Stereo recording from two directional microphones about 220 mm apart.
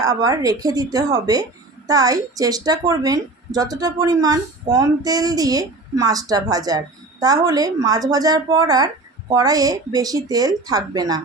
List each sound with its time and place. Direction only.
0.0 s a woman's voice: 15° right (ahead or behind)